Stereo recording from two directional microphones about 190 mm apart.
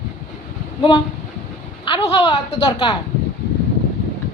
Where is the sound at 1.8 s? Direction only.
30° left (ahead or behind).